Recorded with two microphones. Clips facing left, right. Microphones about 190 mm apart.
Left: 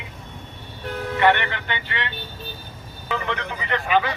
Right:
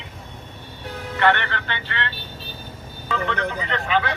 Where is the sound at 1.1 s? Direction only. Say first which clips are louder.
Left 1 dB; 15° left (ahead or behind).